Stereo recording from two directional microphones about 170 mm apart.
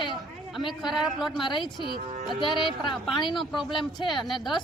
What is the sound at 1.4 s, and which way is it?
A woman's voice, 30° left (ahead or behind).